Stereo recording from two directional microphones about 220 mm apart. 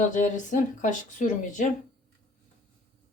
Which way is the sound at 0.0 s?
35° left (ahead or behind).